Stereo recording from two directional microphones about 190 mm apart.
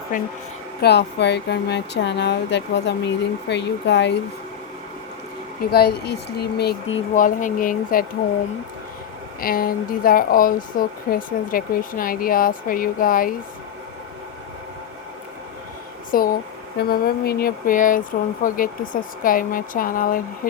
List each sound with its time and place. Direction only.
0.1 s speech: 45° left (ahead or behind)
0.8 s speech: 60° left (ahead or behind)
5.7 s speech: 55° left (ahead or behind)
7.1 s speech: 45° left (ahead or behind)
9.4 s speech: 50° left (ahead or behind)
16.1 s speech: 50° left (ahead or behind)